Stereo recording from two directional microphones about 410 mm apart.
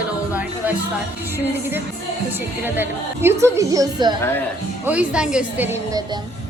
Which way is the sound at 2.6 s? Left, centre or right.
Centre.